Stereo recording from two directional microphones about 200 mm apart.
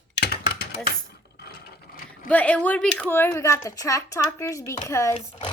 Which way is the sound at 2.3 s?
5° left (ahead or behind).